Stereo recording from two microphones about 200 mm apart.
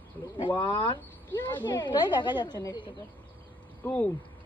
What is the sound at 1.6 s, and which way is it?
A woman's voice, 20° left (ahead or behind).